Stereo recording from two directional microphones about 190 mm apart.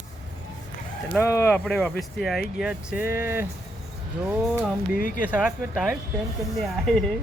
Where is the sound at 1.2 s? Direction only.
10° left (ahead or behind).